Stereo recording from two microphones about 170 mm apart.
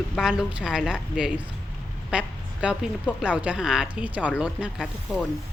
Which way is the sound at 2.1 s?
5° right (ahead or behind).